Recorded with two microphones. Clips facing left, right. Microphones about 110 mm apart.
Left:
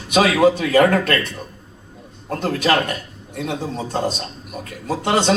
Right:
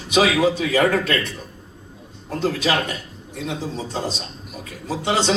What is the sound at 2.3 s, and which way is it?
A man's voice, 55° left (ahead or behind).